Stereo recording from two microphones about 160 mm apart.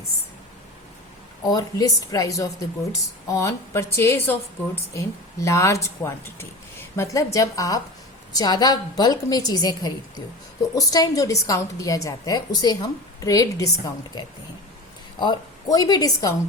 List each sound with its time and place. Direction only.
1.5 s a woman's voice: 20° left (ahead or behind)